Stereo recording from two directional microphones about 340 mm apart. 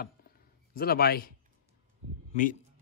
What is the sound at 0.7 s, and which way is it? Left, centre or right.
Speech, left.